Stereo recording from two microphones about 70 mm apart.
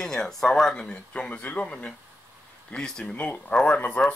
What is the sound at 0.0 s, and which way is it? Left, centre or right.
Speech, centre.